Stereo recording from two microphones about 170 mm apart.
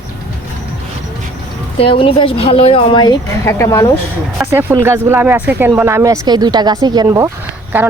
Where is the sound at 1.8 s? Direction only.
30° left (ahead or behind).